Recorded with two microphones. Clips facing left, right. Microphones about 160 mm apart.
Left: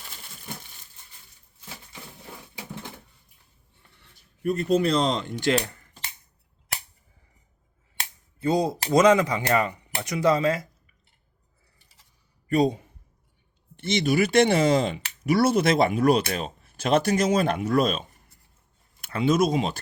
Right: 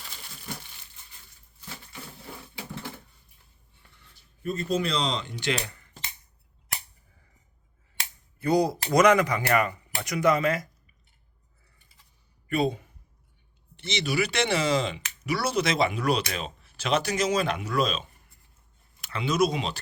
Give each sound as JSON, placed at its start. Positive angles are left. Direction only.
{"t": 4.4, "sound": "speech", "side_deg": 60}
{"t": 8.4, "sound": "speech", "side_deg": 25}
{"t": 12.5, "sound": "speech", "side_deg": 40}
{"t": 13.7, "sound": "speech", "side_deg": 50}